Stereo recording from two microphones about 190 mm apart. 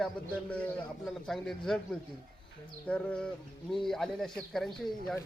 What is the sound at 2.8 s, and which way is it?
Speech, 5° left (ahead or behind).